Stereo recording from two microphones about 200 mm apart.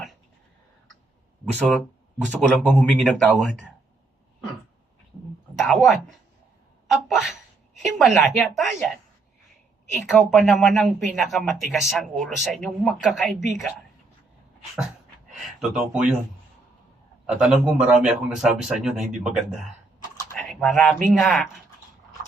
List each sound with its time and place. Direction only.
1.5 s speech: centre (ahead or behind)
5.6 s speech: centre (ahead or behind)
10.2 s speech: centre (ahead or behind)
15.4 s speech: centre (ahead or behind)
17.2 s speech: 5° right (ahead or behind)